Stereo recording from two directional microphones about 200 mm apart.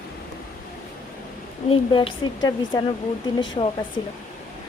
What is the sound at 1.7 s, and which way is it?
Speech, 25° left (ahead or behind).